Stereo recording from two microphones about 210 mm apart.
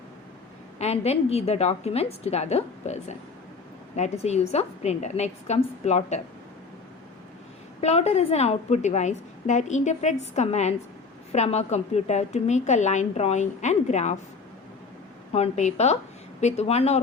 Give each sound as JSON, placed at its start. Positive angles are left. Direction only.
{"t": 0.8, "sound": "a woman's voice", "side_deg": 30}
{"t": 7.8, "sound": "a woman's voice", "side_deg": 30}
{"t": 15.3, "sound": "a woman's voice", "side_deg": 30}